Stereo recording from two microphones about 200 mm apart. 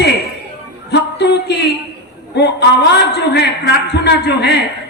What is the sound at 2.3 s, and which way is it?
A man's voice, 55° left (ahead or behind).